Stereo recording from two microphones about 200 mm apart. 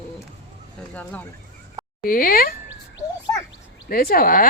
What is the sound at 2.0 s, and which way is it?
Speech, 45° left (ahead or behind).